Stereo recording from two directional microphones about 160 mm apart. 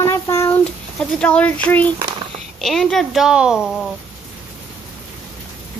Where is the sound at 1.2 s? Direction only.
10° left (ahead or behind).